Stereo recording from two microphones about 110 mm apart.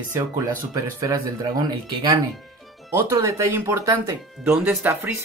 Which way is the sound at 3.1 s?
25° right (ahead or behind).